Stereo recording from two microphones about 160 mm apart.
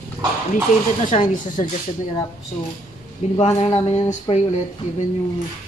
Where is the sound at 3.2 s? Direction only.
45° left (ahead or behind).